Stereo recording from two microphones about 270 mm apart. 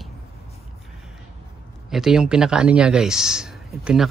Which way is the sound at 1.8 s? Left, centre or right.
Centre.